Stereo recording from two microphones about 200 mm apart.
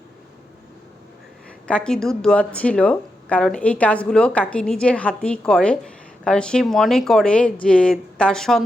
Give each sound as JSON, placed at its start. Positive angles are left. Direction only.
{"t": 1.6, "sound": "speech", "side_deg": 5}